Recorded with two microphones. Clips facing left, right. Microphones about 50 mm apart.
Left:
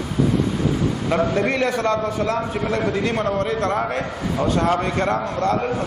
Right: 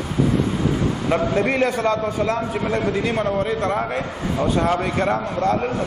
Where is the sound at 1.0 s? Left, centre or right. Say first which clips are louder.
Even; centre.